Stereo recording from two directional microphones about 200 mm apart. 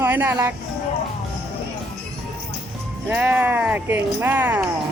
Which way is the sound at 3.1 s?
10° right (ahead or behind).